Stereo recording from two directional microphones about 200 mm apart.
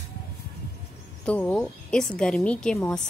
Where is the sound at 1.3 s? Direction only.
5° left (ahead or behind).